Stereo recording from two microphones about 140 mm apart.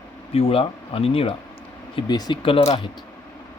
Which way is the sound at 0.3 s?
45° left (ahead or behind).